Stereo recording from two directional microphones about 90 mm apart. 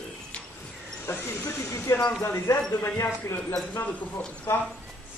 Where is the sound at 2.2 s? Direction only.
30° left (ahead or behind).